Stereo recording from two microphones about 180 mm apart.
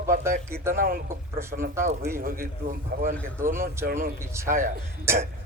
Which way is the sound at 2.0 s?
55° right (ahead or behind).